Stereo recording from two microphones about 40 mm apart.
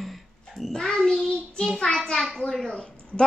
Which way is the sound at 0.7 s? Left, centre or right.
Centre.